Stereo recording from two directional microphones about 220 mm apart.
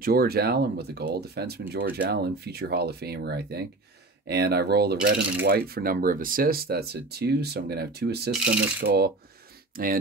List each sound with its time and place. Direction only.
0.0 s speech: 45° right (ahead or behind)